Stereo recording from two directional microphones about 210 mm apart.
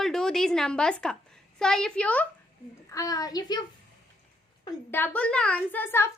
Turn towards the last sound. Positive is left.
turn(degrees=10)  # may be behind; listen again after turning